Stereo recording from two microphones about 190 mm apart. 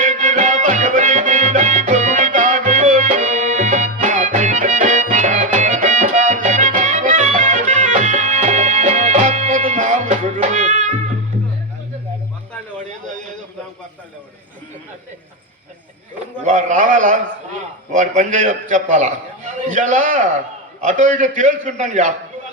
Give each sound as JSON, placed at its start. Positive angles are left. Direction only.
{"t": 0.0, "sound": "music", "side_deg": -40}
{"t": 16.4, "sound": "a sound", "side_deg": -40}
{"t": 20.8, "sound": "a man's voice", "side_deg": -40}